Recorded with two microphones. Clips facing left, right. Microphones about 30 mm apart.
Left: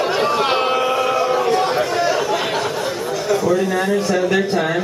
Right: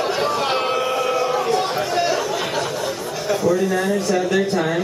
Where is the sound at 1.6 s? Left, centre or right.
Centre.